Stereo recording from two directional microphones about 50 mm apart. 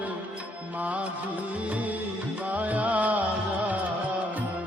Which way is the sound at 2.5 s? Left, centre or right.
Right.